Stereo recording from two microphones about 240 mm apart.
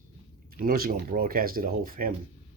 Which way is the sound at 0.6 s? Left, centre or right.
Right.